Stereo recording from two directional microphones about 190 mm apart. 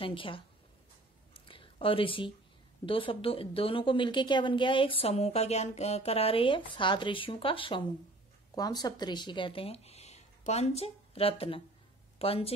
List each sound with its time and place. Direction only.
0.0 s speech: 25° left (ahead or behind)
1.3 s a sound: 25° left (ahead or behind)
2.8 s speech: 25° left (ahead or behind)